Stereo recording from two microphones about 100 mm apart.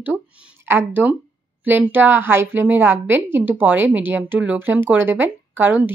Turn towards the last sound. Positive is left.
turn(degrees=-20)  # may be behind; listen again after turning